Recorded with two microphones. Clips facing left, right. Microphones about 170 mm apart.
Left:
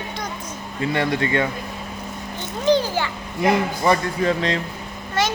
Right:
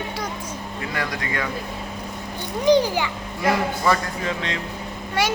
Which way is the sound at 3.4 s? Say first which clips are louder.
Left 2 dB; 20° left (ahead or behind).